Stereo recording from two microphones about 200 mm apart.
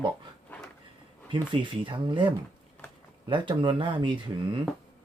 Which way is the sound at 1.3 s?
25° right (ahead or behind).